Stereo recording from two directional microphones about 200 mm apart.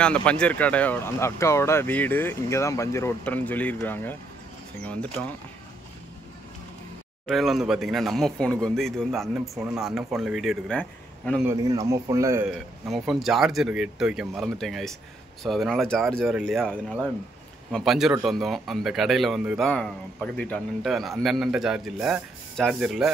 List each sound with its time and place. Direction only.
0.0 s speech: 5° left (ahead or behind)
7.2 s speech: centre (ahead or behind)
11.4 s a man's voice: 15° right (ahead or behind)
12.4 s speech: centre (ahead or behind)